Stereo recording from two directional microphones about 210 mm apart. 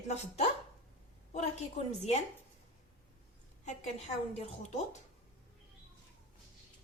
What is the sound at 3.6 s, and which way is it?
Speech, 30° left (ahead or behind).